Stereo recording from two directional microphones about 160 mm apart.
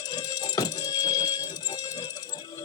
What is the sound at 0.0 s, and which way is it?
Music, 25° left (ahead or behind).